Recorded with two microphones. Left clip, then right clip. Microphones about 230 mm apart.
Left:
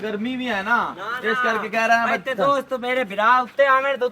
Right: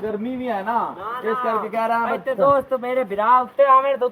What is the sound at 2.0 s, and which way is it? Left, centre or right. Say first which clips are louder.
Speech: right 2 dB; left.